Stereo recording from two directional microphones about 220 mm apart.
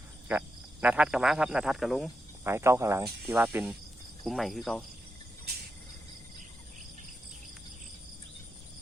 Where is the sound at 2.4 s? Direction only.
10° right (ahead or behind).